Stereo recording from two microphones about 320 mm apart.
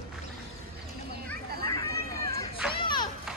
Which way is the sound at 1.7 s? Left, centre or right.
Centre.